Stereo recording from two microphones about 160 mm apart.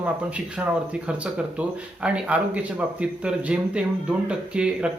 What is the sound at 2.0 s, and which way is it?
Speech, 5° right (ahead or behind).